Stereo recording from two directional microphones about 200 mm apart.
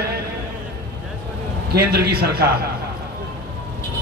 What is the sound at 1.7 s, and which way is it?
Speech, 50° right (ahead or behind).